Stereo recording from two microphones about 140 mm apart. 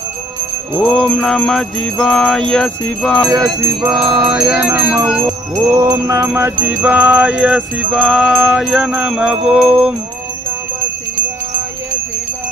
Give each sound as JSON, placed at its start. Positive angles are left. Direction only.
{"t": 0.9, "sound": "jingle bell", "side_deg": 5}
{"t": 3.2, "sound": "music", "side_deg": -25}
{"t": 4.4, "sound": "music", "side_deg": -10}
{"t": 9.0, "sound": "jingle bell", "side_deg": -5}
{"t": 9.5, "sound": "music", "side_deg": -5}